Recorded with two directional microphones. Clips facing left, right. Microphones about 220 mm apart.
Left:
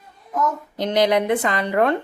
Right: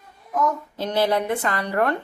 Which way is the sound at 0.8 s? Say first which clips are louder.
Left 4 dB; 15° left (ahead or behind).